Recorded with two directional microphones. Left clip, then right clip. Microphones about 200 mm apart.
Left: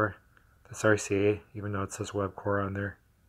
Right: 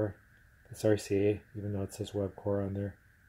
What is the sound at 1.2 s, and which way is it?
Speech, 25° left (ahead or behind).